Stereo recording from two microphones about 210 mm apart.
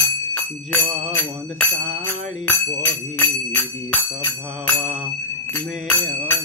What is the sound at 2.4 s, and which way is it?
Speech, 10° left (ahead or behind).